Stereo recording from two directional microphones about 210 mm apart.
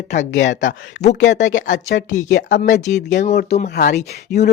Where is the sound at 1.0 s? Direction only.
35° left (ahead or behind).